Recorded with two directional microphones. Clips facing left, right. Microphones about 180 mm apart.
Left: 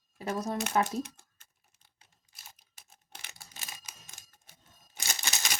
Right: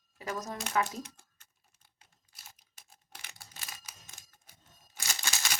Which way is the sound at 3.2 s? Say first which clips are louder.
Even; 20° left (ahead or behind).